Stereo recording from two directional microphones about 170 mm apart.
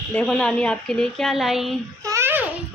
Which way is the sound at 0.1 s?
5° left (ahead or behind).